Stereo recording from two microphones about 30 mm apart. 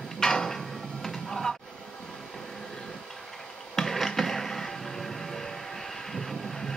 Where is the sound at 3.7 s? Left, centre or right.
Centre.